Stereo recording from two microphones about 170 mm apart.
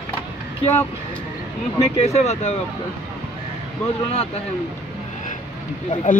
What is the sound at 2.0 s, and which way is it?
Speech, 40° left (ahead or behind).